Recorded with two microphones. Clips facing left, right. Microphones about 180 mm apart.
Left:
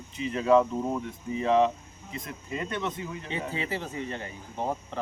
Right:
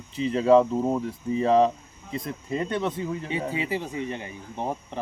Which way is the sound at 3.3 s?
15° right (ahead or behind).